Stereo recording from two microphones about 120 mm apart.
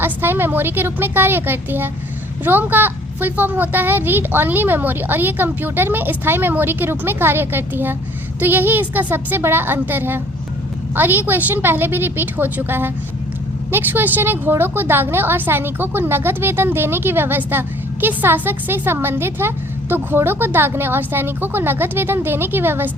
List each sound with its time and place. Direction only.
0.0 s a woman's voice: 20° right (ahead or behind)